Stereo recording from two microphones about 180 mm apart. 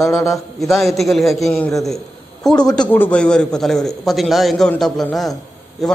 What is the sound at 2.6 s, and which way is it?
Speech, 20° left (ahead or behind).